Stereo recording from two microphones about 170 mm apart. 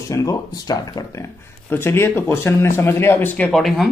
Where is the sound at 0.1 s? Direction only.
20° left (ahead or behind); by 3.9 s centre (ahead or behind).